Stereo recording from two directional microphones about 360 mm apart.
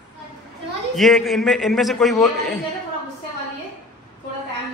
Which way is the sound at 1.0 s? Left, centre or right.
Centre.